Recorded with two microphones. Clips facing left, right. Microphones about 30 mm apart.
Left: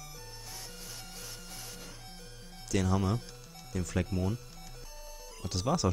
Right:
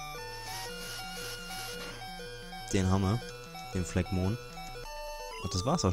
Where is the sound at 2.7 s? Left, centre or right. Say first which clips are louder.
Even; centre.